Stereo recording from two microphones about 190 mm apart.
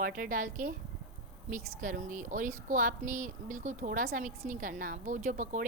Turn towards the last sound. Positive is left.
turn(degrees=-40)  # may be behind; listen again after turning